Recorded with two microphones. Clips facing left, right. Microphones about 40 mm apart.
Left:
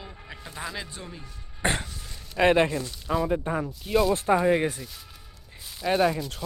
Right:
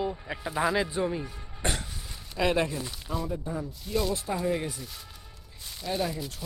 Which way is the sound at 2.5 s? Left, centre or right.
Left.